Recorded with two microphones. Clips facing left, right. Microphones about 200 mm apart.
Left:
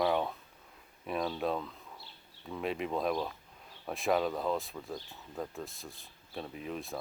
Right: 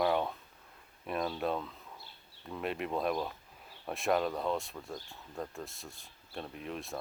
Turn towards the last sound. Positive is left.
turn(degrees=0)  # may be behind; listen again after turning